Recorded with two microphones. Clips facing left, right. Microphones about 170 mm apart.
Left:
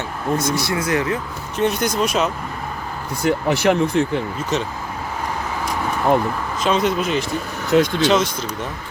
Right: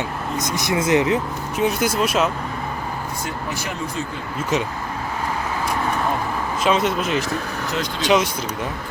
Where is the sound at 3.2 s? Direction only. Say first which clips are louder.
Left 16 dB; 70° left (ahead or behind).